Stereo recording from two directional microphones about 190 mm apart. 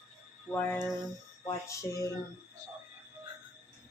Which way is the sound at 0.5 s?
10° left (ahead or behind).